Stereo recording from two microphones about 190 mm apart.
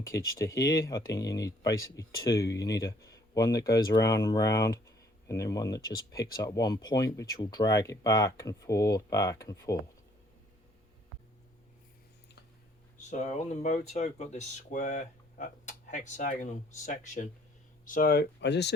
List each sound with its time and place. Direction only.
0.0 s speech: 15° left (ahead or behind)
13.1 s speech: 40° left (ahead or behind); by 18.7 s 65° left (ahead or behind)